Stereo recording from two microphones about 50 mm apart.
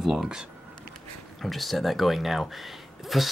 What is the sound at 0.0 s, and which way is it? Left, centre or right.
Speech, centre.